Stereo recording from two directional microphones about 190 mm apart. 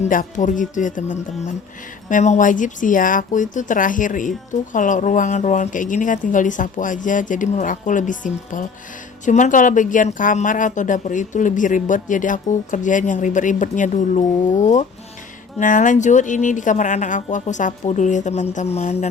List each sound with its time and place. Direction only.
0.0 s speech: 45° left (ahead or behind)